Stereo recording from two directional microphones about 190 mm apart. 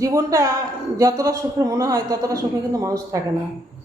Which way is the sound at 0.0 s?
15° right (ahead or behind).